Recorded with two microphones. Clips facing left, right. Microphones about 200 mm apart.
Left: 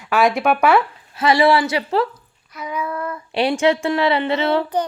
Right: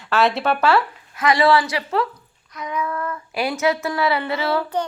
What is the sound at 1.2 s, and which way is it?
Child singing, 25° left (ahead or behind).